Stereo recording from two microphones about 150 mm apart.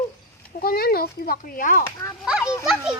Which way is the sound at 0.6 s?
85° left.